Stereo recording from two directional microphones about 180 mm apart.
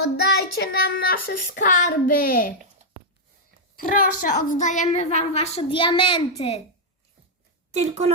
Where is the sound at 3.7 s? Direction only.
50° left (ahead or behind); by 6.6 s 35° left (ahead or behind).